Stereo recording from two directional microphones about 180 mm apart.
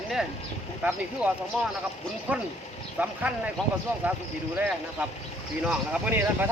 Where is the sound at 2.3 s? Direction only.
10° right (ahead or behind).